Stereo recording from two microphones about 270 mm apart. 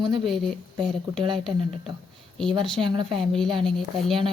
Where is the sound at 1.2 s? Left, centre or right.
Centre.